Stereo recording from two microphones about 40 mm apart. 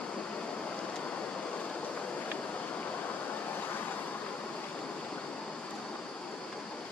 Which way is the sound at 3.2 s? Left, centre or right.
Left.